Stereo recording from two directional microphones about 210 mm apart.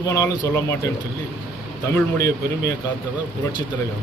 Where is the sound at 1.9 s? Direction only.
15° left (ahead or behind).